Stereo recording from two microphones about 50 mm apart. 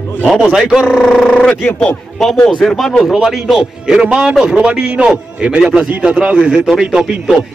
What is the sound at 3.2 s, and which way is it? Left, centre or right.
A man's voice, centre.